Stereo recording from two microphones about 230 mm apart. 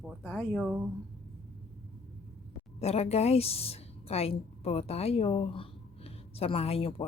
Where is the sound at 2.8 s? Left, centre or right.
Left.